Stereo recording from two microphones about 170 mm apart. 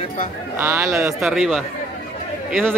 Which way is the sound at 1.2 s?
Centre (ahead or behind).